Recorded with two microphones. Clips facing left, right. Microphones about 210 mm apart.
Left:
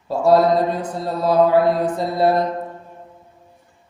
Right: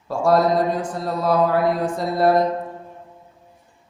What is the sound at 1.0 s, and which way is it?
Mantra, 25° left (ahead or behind).